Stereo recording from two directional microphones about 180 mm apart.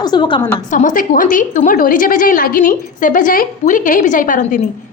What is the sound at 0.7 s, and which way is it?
A woman's voice, 45° left (ahead or behind).